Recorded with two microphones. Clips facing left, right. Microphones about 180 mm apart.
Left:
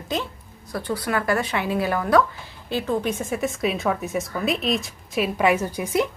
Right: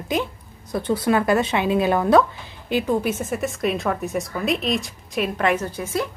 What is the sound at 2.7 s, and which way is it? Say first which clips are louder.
A woman's voice: right 3 dB; 15° right (ahead or behind).